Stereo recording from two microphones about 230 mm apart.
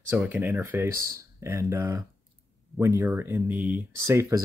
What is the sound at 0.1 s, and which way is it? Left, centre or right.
Speech, centre.